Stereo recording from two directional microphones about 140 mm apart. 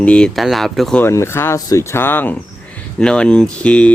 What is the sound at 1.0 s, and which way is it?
Speech, 20° left (ahead or behind).